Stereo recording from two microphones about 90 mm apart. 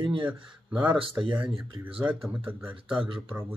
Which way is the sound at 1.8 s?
15° right (ahead or behind).